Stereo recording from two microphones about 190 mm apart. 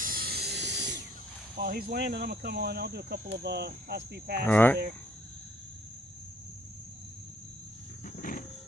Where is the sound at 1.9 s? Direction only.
60° right (ahead or behind).